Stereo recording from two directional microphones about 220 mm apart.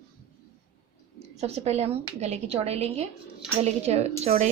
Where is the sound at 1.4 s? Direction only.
30° right (ahead or behind).